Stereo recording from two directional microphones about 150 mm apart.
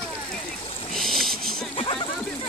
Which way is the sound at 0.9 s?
Centre (ahead or behind).